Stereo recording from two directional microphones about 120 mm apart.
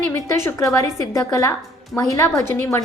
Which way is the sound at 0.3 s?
25° left (ahead or behind).